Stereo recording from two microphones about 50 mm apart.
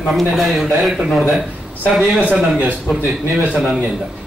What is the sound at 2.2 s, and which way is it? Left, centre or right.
Speech, right.